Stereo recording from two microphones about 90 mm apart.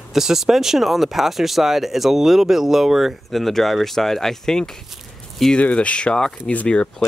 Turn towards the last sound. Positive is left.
turn(degrees=15)  # may be behind; listen again after turning